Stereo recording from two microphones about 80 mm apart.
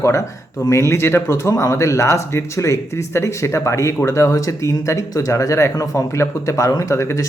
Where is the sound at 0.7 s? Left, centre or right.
Left.